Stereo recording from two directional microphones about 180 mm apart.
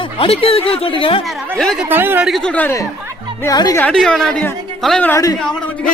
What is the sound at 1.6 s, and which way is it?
Speech, 5° left (ahead or behind).